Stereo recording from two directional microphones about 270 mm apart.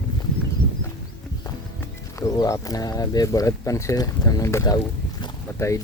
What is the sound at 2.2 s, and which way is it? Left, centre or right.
Speech, centre.